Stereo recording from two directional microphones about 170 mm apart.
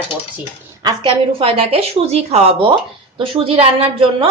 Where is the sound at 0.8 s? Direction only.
25° right (ahead or behind).